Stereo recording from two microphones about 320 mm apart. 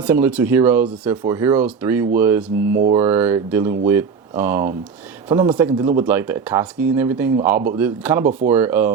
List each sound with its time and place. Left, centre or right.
0.0 s speech: centre
2.7 s speech: right
3.0 s speech: centre